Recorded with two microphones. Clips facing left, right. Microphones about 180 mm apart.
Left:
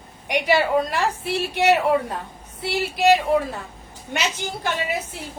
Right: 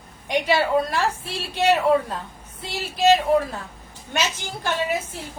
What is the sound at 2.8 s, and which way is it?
Speech, 15° left (ahead or behind).